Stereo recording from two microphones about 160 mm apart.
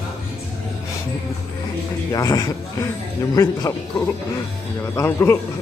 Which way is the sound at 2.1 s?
25° left (ahead or behind).